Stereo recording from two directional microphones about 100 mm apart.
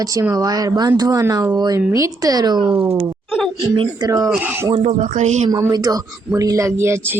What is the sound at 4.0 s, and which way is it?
Speech, 35° right (ahead or behind).